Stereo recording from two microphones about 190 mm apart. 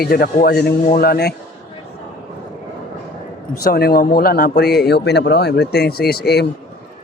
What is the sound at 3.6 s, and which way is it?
Speech, 55° left (ahead or behind).